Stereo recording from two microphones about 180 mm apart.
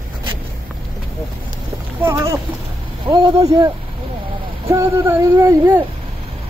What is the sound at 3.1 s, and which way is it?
Speech, 20° right (ahead or behind).